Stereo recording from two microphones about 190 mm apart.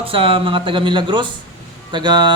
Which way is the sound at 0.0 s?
30° right (ahead or behind).